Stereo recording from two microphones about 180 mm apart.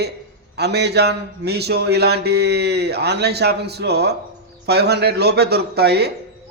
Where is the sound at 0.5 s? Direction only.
65° right (ahead or behind).